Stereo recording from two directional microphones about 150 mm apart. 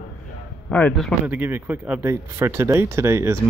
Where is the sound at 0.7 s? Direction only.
10° left (ahead or behind).